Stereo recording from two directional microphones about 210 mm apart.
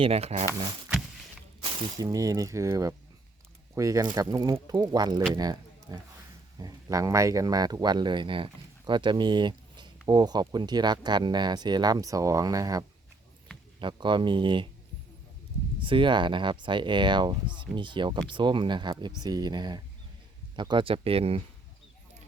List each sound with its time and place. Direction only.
0.0 s speech: 30° right (ahead or behind)
1.6 s speech: 20° right (ahead or behind)
15.8 s speech: 25° right (ahead or behind)